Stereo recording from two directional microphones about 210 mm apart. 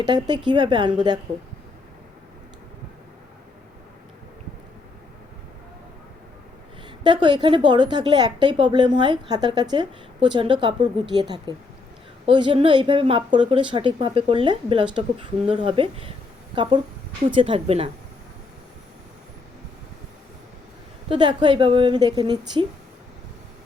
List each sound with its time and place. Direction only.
0.0 s a woman's voice: 20° right (ahead or behind)
7.0 s a woman's voice: 20° right (ahead or behind)
21.1 s a woman's voice: 20° right (ahead or behind)